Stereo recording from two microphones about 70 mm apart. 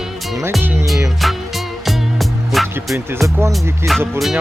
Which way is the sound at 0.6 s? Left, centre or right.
Right.